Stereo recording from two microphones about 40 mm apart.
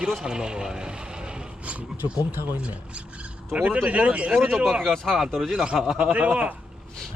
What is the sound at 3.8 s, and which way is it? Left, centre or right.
Speech, right.